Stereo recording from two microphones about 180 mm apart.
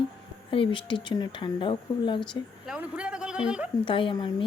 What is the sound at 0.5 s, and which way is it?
Speech, 30° left (ahead or behind).